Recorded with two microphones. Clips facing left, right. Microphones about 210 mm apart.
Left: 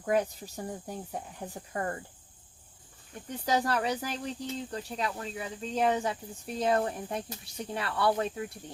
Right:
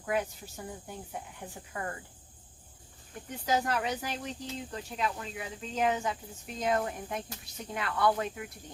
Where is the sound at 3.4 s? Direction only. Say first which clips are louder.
Left 2 dB; 35° left (ahead or behind).